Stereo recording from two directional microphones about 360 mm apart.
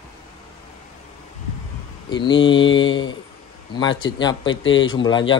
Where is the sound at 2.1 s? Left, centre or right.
Centre.